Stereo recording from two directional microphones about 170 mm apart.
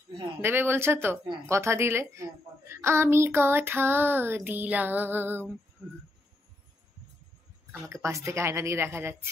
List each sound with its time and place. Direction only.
0.4 s a woman's voice: 15° right (ahead or behind)
7.9 s a woman's voice: 15° right (ahead or behind)